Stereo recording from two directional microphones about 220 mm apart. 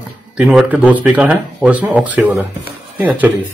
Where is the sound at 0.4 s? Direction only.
5° right (ahead or behind).